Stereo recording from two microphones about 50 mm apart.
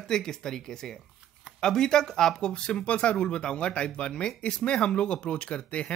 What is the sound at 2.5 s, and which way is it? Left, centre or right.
Speech, left.